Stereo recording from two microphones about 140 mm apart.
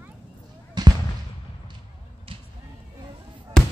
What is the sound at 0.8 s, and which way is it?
Fireworks, 30° right (ahead or behind).